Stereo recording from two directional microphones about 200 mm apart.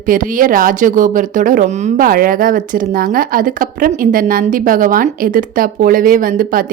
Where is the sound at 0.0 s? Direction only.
40° right (ahead or behind).